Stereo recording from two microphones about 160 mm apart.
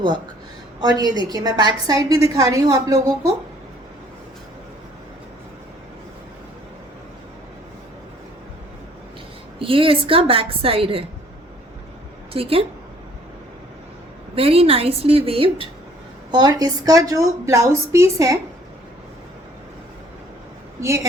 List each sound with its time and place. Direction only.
0.8 s a woman's voice: 25° right (ahead or behind)
9.6 s a woman's voice: 35° right (ahead or behind)
12.3 s a woman's voice: 35° right (ahead or behind)
14.3 s a woman's voice: 35° right (ahead or behind); by 18.3 s 20° right (ahead or behind)